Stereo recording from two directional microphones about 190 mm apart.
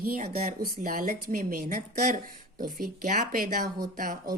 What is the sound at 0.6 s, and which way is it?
A woman's voice, 45° right (ahead or behind).